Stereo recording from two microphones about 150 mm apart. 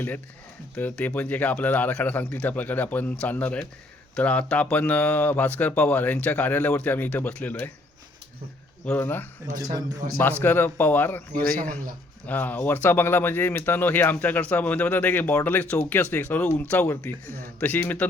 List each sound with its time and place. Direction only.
0.8 s speech: 10° left (ahead or behind)
8.8 s speech: 10° left (ahead or behind)
9.6 s a man's voice: 25° right (ahead or behind)
10.4 s speech: 15° left (ahead or behind)
12.2 s speech: 10° left (ahead or behind)
17.2 s speech: 75° right (ahead or behind)
17.6 s speech: 10° left (ahead or behind)